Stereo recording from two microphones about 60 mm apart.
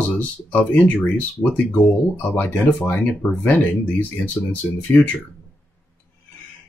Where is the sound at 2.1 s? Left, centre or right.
Left.